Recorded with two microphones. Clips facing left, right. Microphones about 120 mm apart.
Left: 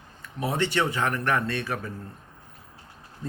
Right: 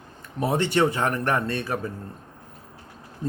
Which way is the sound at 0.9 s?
40° right (ahead or behind).